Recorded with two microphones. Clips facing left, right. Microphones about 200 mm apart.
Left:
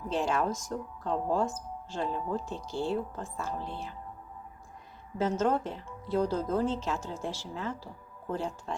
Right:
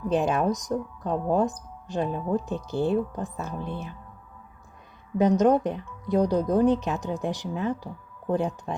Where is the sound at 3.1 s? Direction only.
15° right (ahead or behind).